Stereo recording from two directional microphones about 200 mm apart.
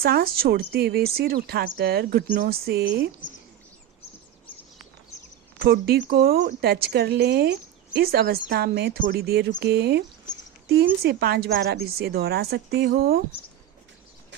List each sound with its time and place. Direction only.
0.0 s a woman's voice: 50° right (ahead or behind)
5.5 s a woman's voice: 50° right (ahead or behind)
11.0 s a woman's voice: 55° right (ahead or behind)